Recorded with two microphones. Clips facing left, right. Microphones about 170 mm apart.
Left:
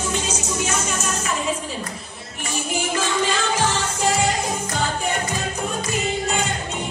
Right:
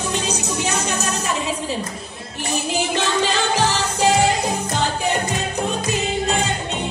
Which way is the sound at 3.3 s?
65° right (ahead or behind).